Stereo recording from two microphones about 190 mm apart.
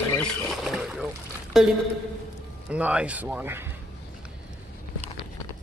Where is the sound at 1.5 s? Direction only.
Centre (ahead or behind).